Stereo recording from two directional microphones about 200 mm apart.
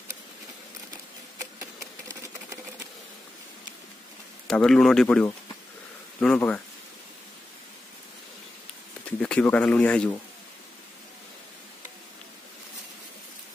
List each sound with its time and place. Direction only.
2.0 s engine: 15° right (ahead or behind)
4.5 s speech: 5° left (ahead or behind)
9.2 s speech: 5° left (ahead or behind)